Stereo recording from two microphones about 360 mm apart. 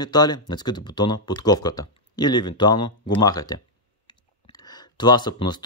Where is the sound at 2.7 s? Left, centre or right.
Left.